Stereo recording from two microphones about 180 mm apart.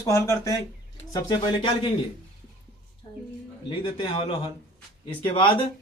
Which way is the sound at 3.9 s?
25° left (ahead or behind).